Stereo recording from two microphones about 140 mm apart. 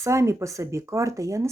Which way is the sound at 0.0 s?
20° right (ahead or behind).